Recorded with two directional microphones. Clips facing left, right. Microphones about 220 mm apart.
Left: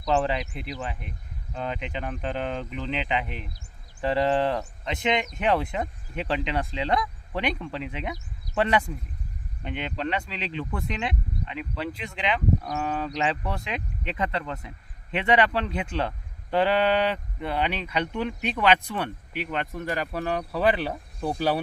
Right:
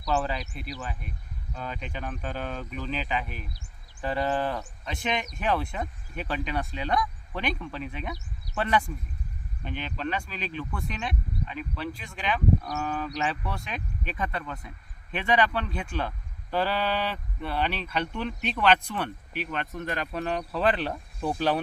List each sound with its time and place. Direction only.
0.0 s speech: 20° left (ahead or behind); by 21.6 s 5° left (ahead or behind)